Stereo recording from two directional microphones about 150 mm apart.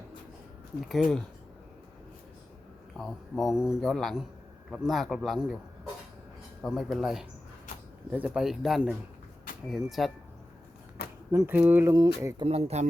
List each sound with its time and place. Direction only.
0.8 s speech: centre (ahead or behind)
3.0 s speech: centre (ahead or behind)
6.6 s speech: centre (ahead or behind)
11.3 s speech: 15° right (ahead or behind)
11.9 s speech: 30° right (ahead or behind)
12.5 s speech: 45° right (ahead or behind)